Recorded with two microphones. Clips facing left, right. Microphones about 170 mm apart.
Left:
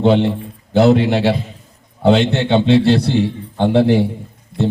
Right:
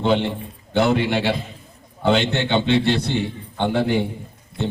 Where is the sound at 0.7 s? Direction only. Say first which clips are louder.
Left 6 dB; 35° left (ahead or behind).